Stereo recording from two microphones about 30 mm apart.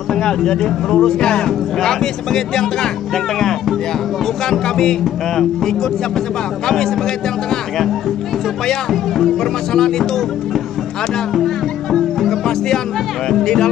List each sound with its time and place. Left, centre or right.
0.1 s a sound: left
0.5 s speech: centre
0.9 s speech: left
4.5 s speech: centre
8.9 s speech: centre
9.4 s speech: centre
11.3 s music: centre
13.3 s speech: centre